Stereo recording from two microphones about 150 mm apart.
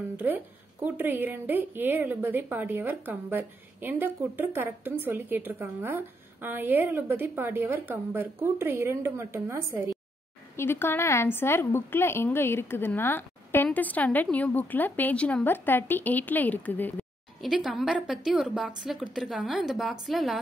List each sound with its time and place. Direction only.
0.8 s a woman's voice: 15° right (ahead or behind)
10.5 s a woman's voice: 15° left (ahead or behind)
17.4 s speech: centre (ahead or behind)